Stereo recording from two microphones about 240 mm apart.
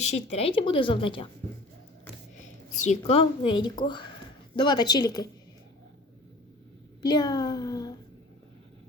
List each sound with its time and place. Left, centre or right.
0.0 s a woman's voice: left
2.4 s speech: left
7.0 s speech: centre